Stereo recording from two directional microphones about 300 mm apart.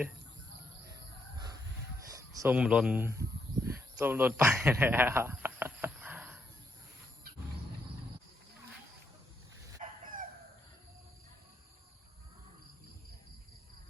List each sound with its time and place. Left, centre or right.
2.1 s speech: centre
3.7 s a sound: centre
9.8 s chicken: right